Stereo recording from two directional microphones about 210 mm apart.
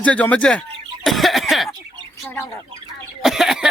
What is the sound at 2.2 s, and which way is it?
Bird, 10° left (ahead or behind).